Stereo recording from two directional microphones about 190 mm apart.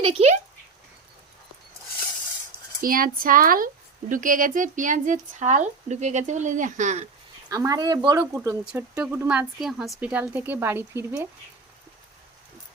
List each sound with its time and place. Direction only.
0.0 s speech: 30° right (ahead or behind)
2.8 s speech: 50° right (ahead or behind)
7.5 s speech: 20° right (ahead or behind)